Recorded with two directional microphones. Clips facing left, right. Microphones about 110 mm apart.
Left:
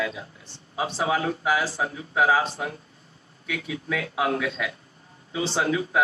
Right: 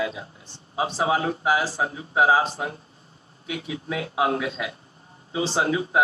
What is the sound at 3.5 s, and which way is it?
A man's voice, 25° right (ahead or behind).